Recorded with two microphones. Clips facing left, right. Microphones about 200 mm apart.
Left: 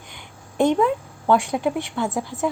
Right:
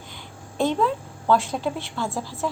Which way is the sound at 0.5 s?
15° left (ahead or behind).